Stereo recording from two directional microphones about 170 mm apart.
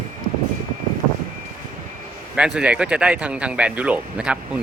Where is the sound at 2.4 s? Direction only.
5° right (ahead or behind).